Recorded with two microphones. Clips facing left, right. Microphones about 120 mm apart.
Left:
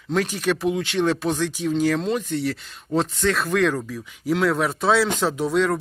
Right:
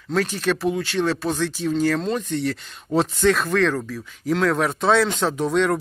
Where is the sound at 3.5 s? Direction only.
10° left (ahead or behind).